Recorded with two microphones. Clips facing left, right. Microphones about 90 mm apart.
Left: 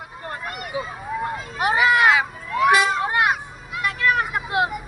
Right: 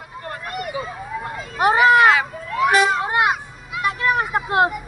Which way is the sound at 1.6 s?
35° right (ahead or behind).